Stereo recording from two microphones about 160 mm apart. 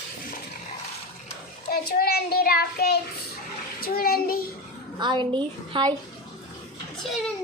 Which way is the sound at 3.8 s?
70° left (ahead or behind).